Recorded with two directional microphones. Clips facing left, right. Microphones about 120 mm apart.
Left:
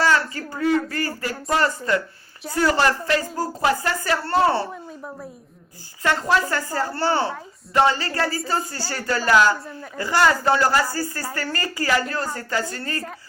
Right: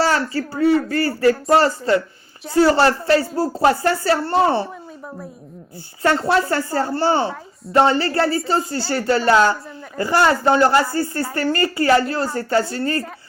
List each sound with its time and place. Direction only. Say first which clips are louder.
0.0 s speech: right 2 dB; 35° right (ahead or behind)
6.0 s speech: right 4 dB; 35° right (ahead or behind)
7.0 s a man's voice: right 1 dB; 20° right (ahead or behind)